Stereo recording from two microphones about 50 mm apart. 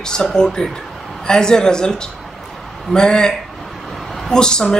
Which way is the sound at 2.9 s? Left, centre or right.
Centre.